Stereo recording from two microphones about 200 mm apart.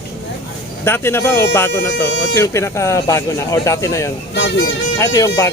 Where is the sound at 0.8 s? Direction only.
10° left (ahead or behind).